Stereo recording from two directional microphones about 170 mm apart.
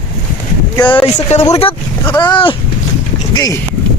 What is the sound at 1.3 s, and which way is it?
Speech, 40° left (ahead or behind).